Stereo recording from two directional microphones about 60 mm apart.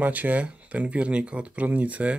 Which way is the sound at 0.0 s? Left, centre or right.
Right.